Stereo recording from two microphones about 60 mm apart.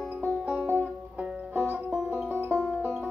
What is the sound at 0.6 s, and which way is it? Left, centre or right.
Music, right.